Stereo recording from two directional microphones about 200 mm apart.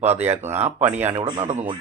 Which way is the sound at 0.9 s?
10° right (ahead or behind).